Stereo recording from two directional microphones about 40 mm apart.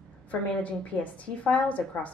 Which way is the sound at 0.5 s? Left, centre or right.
Left.